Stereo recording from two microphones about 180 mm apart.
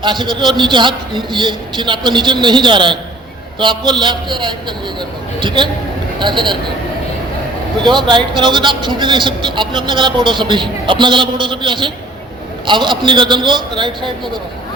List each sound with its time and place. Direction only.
0.0 s a man's voice: 25° right (ahead or behind)
7.9 s a man's voice: 25° right (ahead or behind)